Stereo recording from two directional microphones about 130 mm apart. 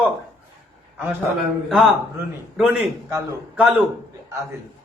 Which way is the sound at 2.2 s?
20° right (ahead or behind).